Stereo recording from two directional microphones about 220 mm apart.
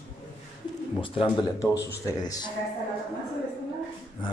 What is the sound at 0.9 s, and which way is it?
A woman's voice, 25° left (ahead or behind).